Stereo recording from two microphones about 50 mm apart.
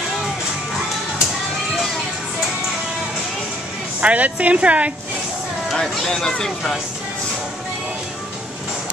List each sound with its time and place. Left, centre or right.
4.0 s speech: right
5.8 s speech: centre